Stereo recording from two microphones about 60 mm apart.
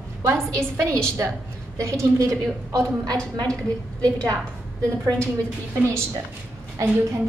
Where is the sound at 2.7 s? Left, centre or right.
Right.